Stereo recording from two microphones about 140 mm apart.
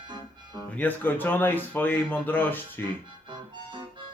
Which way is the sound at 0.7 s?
10° left (ahead or behind).